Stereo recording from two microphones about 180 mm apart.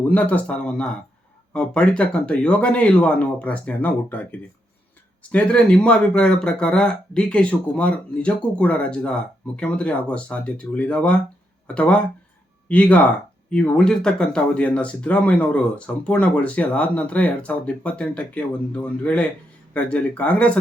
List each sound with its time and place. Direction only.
0.0 s speech: 10° left (ahead or behind)